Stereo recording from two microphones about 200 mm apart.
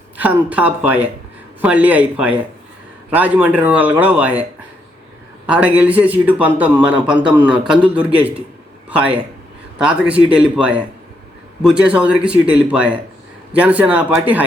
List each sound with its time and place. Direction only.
0.2 s a man's voice: 10° right (ahead or behind)
5.5 s a man's voice: 5° right (ahead or behind)